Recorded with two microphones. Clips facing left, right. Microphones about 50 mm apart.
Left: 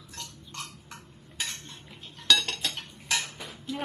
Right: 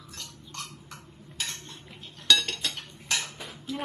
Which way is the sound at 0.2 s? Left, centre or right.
Centre.